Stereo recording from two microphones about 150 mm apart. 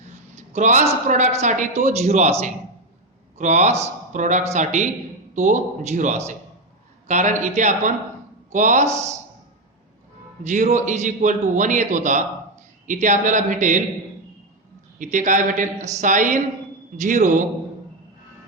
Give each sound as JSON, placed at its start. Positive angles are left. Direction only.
{"t": 0.3, "sound": "a man's voice", "side_deg": -50}
{"t": 3.3, "sound": "a man's voice", "side_deg": -50}
{"t": 10.4, "sound": "a man's voice", "side_deg": -50}
{"t": 14.9, "sound": "a man's voice", "side_deg": -60}